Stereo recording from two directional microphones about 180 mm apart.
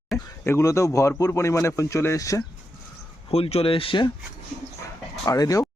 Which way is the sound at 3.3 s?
35° left (ahead or behind).